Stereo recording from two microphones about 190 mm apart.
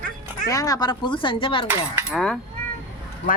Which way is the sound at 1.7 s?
10° right (ahead or behind).